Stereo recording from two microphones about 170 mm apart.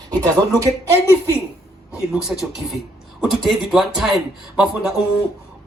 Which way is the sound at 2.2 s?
Centre (ahead or behind).